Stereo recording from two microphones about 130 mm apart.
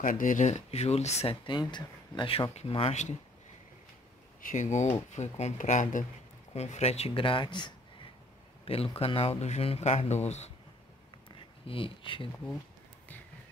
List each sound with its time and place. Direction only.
0.0 s speech: 90° left; by 1.3 s 55° left (ahead or behind)
1.3 s speech: 35° left (ahead or behind)
4.4 s speech: 80° left
6.5 s speech: 55° left (ahead or behind)
11.6 s speech: 45° left (ahead or behind)